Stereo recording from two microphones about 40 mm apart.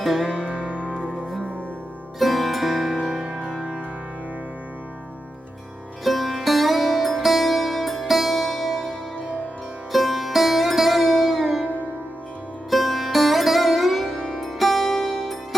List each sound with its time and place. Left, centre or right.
0.0 s music: centre
0.4 s music: left
2.1 s music: centre
6.1 s music: centre
9.9 s music: centre
12.7 s sitar: centre